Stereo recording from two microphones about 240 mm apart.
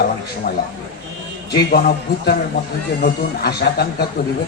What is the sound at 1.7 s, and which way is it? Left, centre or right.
A man's voice, left.